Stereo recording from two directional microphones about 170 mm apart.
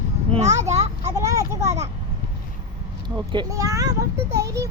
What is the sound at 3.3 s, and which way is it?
A child's voice, 25° right (ahead or behind).